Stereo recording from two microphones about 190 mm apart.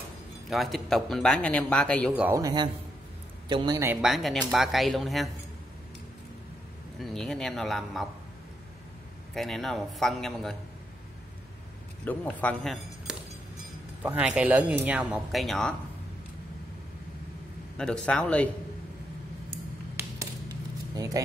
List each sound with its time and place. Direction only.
0.5 s speech: centre (ahead or behind)
2.2 s speech: 15° right (ahead or behind); by 5.3 s centre (ahead or behind)
7.0 s speech: centre (ahead or behind)
9.3 s speech: centre (ahead or behind)
12.0 s a man's voice: 10° left (ahead or behind)
14.0 s speech: 5° right (ahead or behind)
17.7 s speech: 5° left (ahead or behind)
20.0 s a sound: 20° right (ahead or behind)